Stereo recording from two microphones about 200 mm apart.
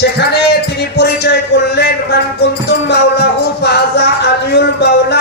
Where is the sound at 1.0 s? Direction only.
55° left (ahead or behind).